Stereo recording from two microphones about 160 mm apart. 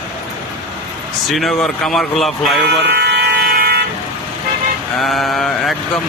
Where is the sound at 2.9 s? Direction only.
90° right.